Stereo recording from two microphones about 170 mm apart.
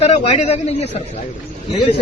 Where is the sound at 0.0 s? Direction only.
40° left (ahead or behind).